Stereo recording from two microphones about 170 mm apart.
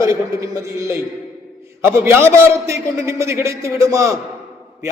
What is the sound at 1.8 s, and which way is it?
A man's voice, 15° right (ahead or behind).